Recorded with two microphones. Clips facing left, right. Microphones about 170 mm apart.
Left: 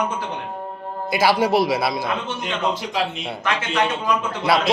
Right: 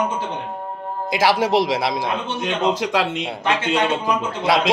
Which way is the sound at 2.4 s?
90° right.